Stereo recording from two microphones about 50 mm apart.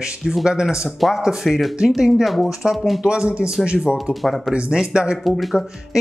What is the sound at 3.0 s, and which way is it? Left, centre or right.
A man's voice, centre.